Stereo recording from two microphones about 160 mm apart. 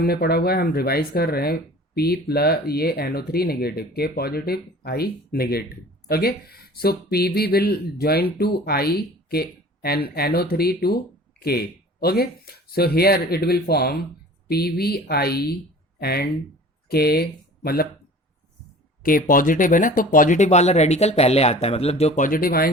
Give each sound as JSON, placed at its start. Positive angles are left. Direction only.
{"t": 0.0, "sound": "speech", "side_deg": 75}
{"t": 19.0, "sound": "speech", "side_deg": 60}